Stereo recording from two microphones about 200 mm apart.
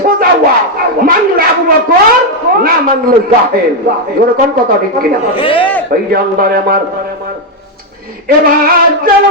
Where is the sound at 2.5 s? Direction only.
45° right (ahead or behind).